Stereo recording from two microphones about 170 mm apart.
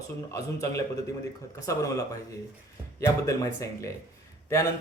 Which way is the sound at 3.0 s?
20° left (ahead or behind).